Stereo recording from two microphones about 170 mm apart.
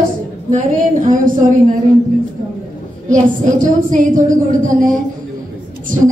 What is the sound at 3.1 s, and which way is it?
A woman's voice, 50° right (ahead or behind).